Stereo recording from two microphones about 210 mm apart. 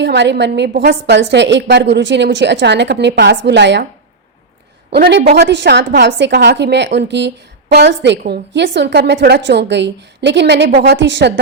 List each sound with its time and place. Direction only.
0.0 s a woman's voice: 55° right (ahead or behind)
4.9 s a woman's voice: 50° right (ahead or behind)